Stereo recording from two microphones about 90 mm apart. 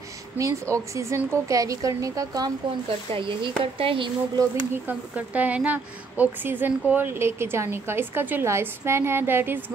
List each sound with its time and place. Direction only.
0.4 s a woman's voice: 35° right (ahead or behind)
3.1 s speech: 70° right (ahead or behind)
4.8 s a woman's voice: 15° right (ahead or behind)